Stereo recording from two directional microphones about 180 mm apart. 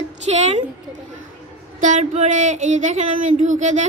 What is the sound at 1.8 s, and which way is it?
Speech, 40° right (ahead or behind).